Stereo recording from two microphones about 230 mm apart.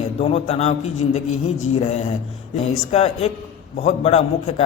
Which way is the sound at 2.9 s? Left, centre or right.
Left.